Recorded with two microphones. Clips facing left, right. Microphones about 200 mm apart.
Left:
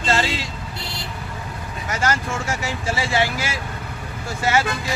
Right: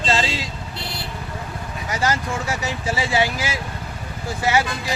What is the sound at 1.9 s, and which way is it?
Speech, 15° right (ahead or behind).